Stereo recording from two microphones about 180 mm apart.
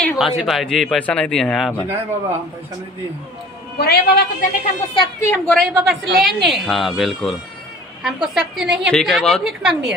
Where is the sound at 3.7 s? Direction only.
60° left (ahead or behind).